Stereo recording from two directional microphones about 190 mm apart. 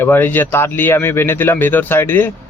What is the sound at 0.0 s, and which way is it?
Speech, 10° left (ahead or behind).